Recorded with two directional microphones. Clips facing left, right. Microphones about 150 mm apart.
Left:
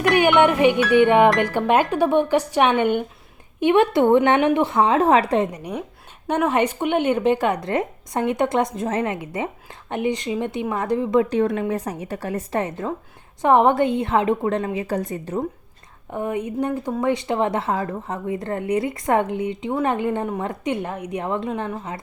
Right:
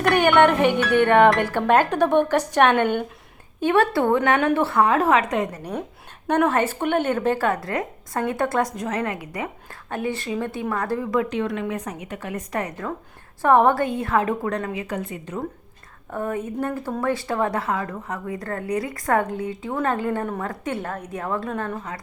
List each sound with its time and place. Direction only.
0.0 s speech: 10° left (ahead or behind); by 5.5 s 30° left (ahead or behind)
5.5 s speech: 10° left (ahead or behind)
11.3 s a woman's voice: 40° left (ahead or behind)
16.1 s speech: 15° left (ahead or behind)